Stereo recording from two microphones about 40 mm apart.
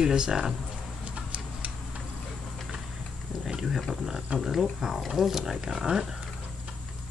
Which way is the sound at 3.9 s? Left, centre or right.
Centre.